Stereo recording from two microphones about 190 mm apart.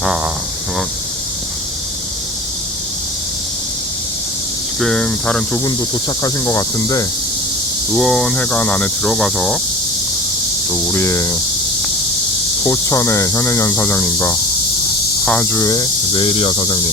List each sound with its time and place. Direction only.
4.8 s speech: 5° left (ahead or behind)
6.2 s speech: 15° left (ahead or behind)
7.9 s speech: centre (ahead or behind)
10.9 s speech: 15° left (ahead or behind)
12.6 s speech: 15° left (ahead or behind)